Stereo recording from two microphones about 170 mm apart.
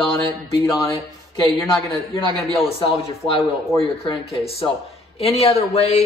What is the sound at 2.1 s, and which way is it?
Speech, 35° left (ahead or behind).